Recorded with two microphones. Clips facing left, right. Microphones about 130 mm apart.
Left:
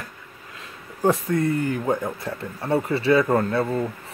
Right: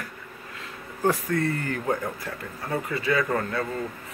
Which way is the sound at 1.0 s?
20° left (ahead or behind).